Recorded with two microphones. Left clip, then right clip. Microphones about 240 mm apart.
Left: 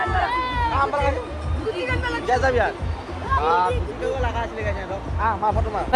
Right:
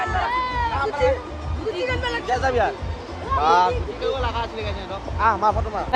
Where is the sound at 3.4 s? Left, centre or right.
Right.